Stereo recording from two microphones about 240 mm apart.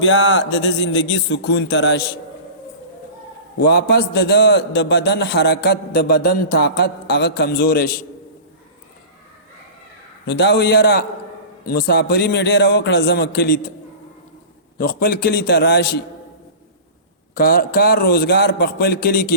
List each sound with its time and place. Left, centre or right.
0.0 s a man's voice: left
3.7 s a man's voice: left
10.2 s a man's voice: left
14.8 s a man's voice: left
17.3 s a man's voice: left